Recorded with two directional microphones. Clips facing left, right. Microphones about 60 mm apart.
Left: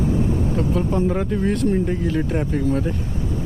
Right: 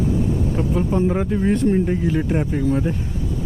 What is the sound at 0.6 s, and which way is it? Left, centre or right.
Speech, centre.